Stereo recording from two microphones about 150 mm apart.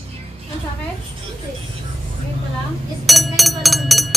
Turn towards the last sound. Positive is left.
turn(degrees=0)  # may be behind; listen again after turning